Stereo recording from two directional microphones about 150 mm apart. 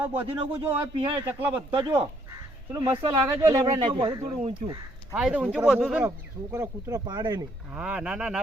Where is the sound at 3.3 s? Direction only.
25° right (ahead or behind).